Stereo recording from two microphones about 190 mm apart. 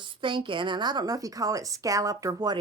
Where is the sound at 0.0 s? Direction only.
25° right (ahead or behind).